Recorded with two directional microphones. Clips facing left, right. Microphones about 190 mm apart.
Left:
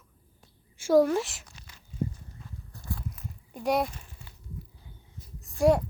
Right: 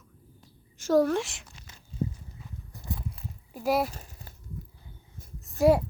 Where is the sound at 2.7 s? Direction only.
20° right (ahead or behind).